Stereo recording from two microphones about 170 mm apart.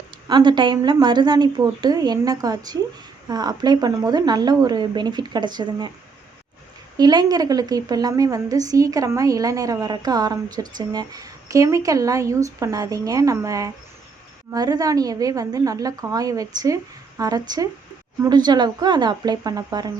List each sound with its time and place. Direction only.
0.3 s a woman's voice: 25° right (ahead or behind)
6.9 s a woman's voice: 25° right (ahead or behind)